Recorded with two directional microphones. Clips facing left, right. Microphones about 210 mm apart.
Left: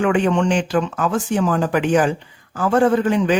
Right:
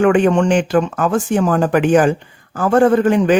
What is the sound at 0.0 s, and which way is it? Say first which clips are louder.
A man's voice: right 5 dB; 50° right (ahead or behind).